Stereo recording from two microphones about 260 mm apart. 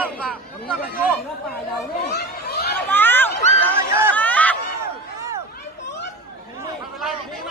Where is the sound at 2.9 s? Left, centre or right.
Centre.